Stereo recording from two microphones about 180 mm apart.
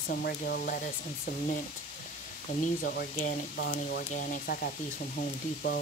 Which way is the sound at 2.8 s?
60° left (ahead or behind).